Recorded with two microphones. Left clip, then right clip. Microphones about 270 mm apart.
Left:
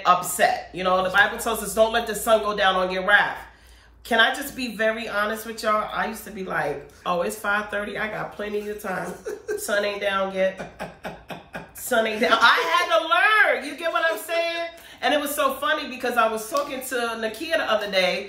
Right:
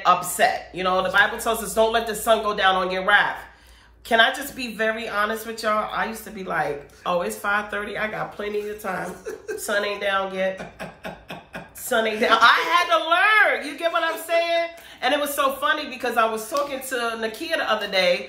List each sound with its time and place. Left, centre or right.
0.0 s a woman's voice: centre